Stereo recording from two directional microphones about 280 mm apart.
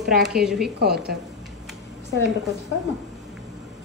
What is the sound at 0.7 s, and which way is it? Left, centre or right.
Speech, right.